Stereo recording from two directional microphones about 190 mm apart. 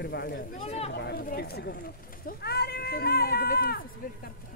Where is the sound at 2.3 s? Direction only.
55° left (ahead or behind).